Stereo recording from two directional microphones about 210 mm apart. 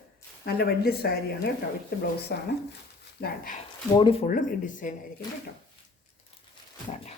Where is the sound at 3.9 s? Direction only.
25° left (ahead or behind).